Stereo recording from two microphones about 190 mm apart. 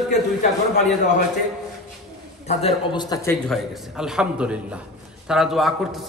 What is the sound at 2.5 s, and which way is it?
Speech, 35° left (ahead or behind).